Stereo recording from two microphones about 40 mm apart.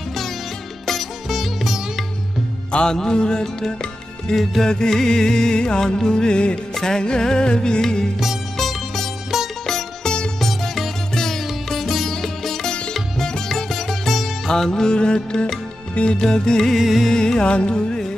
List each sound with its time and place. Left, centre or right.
0.8 s sitar: centre
2.7 s music: centre
6.7 s music: centre
8.5 s music: centre
9.3 s music: centre
9.7 s music: centre
12.1 s sitar: centre
12.6 s sitar: left
12.9 s sitar: centre
14.5 s music: centre
15.9 s music: left
16.2 s music: centre
16.7 s music: centre
17.1 s music: centre